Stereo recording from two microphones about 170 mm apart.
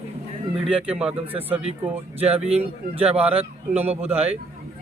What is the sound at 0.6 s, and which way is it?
Speech, 5° right (ahead or behind).